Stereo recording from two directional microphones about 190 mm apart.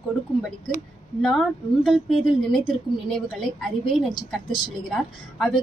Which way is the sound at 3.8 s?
25° left (ahead or behind).